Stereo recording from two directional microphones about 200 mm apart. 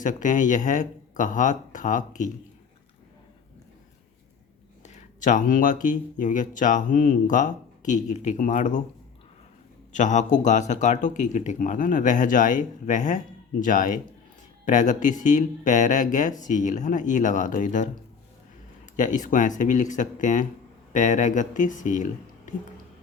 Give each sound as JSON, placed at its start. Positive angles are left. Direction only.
{"t": 0.0, "sound": "speech", "side_deg": 40}
{"t": 4.8, "sound": "speech", "side_deg": 35}
{"t": 9.9, "sound": "speech", "side_deg": 35}
{"t": 18.9, "sound": "speech", "side_deg": 40}